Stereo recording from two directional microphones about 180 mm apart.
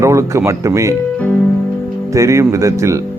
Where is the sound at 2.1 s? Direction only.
15° right (ahead or behind).